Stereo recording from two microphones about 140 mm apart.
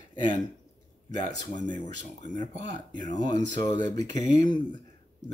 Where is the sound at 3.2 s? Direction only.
30° left (ahead or behind).